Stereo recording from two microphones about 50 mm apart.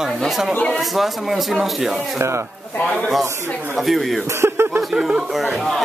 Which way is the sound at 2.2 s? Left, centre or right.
Right.